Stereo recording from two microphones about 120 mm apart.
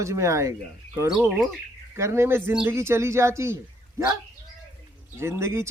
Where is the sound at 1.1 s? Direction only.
Centre (ahead or behind).